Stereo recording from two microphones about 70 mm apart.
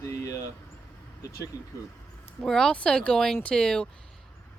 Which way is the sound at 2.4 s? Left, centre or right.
Centre.